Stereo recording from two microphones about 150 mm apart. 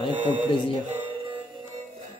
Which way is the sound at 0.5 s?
35° left (ahead or behind).